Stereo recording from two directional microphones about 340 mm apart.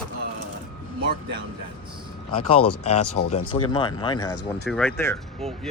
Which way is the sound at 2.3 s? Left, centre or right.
Left.